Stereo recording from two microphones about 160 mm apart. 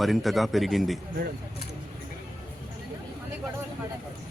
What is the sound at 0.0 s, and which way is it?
Speech, centre (ahead or behind).